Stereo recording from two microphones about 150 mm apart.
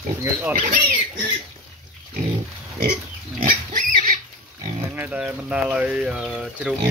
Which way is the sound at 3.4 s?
65° right (ahead or behind).